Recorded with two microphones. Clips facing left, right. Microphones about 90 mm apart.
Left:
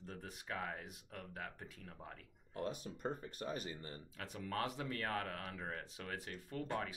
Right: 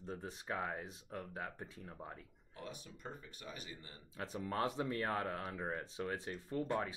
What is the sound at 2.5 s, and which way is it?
Speech, 50° left (ahead or behind).